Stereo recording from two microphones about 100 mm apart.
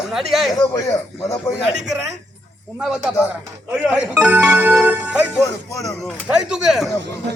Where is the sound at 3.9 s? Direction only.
15° right (ahead or behind).